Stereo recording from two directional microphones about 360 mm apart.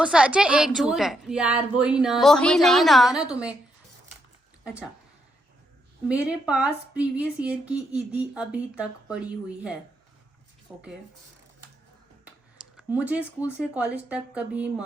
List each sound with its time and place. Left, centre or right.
0.0 s speech: centre
6.1 s speech: centre
12.2 s speech: centre